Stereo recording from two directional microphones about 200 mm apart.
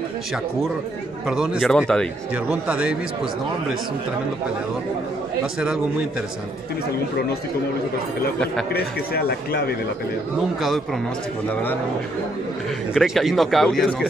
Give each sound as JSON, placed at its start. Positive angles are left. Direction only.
{"t": 1.2, "sound": "a man's voice", "side_deg": -5}
{"t": 8.7, "sound": "speech", "side_deg": 50}
{"t": 12.9, "sound": "a man's voice", "side_deg": 0}